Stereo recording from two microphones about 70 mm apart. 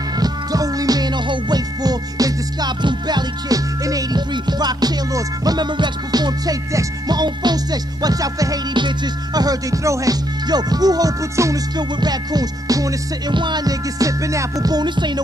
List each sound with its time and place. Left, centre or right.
0.2 s music: right
7.1 s music: right
10.4 s music: right
11.7 s music: right
13.4 s music: right
14.7 s music: right